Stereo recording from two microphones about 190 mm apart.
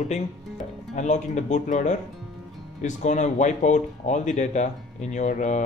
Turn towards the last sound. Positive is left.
turn(degrees=40)  # may be behind; listen again after turning